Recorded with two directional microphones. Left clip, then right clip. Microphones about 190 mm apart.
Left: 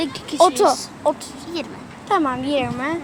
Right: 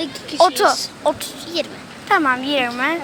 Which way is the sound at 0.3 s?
60° left (ahead or behind).